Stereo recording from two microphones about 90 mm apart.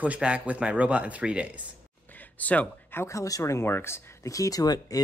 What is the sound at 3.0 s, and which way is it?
Speech, 35° left (ahead or behind).